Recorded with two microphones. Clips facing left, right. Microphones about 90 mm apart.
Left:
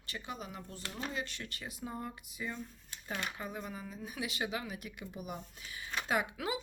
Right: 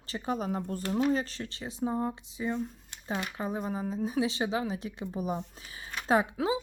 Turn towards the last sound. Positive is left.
turn(degrees=-25)  # may be behind; listen again after turning